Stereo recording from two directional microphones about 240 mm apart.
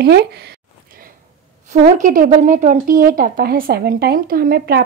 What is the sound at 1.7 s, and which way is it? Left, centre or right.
Speech, right.